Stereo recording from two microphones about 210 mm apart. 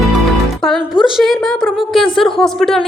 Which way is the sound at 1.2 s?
Centre (ahead or behind).